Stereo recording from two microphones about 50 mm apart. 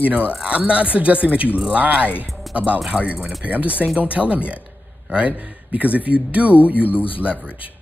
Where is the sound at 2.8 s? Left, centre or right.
Right.